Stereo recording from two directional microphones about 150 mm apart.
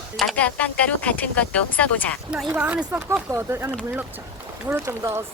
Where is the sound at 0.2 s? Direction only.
5° left (ahead or behind).